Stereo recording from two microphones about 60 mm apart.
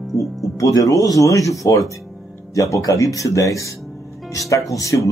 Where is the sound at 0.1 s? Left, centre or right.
Left.